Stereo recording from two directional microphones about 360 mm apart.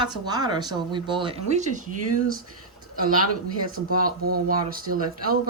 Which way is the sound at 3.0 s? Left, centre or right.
Right.